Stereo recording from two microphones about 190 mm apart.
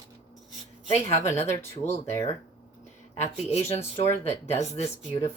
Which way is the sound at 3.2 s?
35° left (ahead or behind).